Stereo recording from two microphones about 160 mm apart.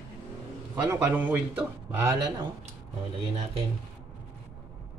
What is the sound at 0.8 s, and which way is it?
Speech, 15° right (ahead or behind).